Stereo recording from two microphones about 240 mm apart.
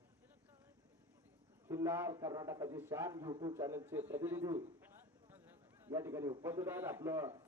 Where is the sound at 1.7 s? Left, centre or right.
Centre.